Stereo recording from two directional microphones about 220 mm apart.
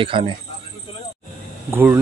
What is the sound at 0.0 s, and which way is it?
Speech, 25° right (ahead or behind).